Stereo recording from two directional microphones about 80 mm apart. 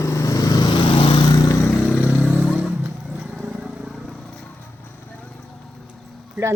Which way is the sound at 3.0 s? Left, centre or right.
Centre.